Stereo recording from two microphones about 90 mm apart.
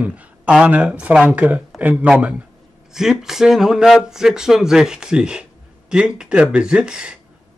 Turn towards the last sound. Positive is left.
turn(degrees=-10)  # may be behind; listen again after turning